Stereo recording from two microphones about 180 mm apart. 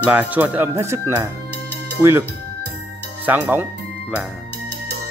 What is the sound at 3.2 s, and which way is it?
Speech, 10° right (ahead or behind).